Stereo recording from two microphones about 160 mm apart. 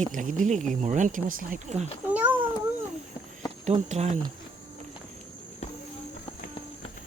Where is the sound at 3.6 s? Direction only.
45° right (ahead or behind).